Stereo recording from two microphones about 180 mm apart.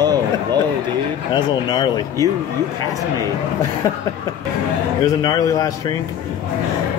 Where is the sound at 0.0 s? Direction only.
20° right (ahead or behind).